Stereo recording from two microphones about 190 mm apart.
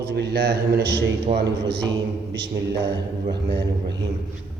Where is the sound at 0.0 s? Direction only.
55° right (ahead or behind).